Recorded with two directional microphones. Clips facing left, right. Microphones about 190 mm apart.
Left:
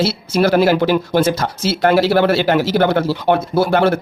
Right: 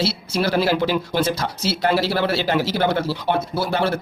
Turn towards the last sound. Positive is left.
turn(degrees=55)  # may be behind; listen again after turning